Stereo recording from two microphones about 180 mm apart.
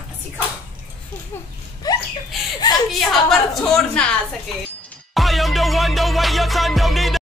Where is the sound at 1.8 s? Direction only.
20° left (ahead or behind).